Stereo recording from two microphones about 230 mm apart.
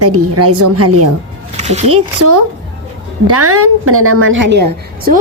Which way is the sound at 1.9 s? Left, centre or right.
Right.